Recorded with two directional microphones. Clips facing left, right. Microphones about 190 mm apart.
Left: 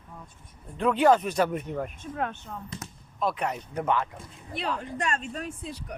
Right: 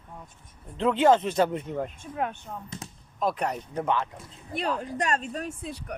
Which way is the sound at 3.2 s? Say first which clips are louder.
Right 1 dB; 40° right (ahead or behind).